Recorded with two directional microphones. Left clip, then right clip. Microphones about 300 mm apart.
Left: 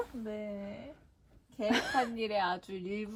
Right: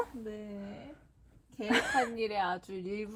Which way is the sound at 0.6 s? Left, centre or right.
Centre.